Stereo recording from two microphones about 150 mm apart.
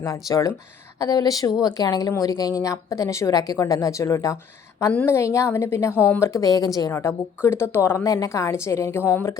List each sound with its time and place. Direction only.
0.0 s a woman's voice: 20° left (ahead or behind)